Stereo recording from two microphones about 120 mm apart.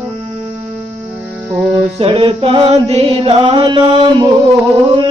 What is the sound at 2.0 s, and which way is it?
Mantra, 50° right (ahead or behind).